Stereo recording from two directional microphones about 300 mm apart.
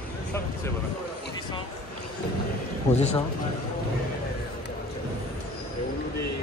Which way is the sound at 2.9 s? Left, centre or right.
Left.